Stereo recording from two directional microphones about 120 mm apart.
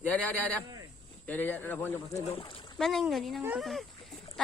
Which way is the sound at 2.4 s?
50° left (ahead or behind).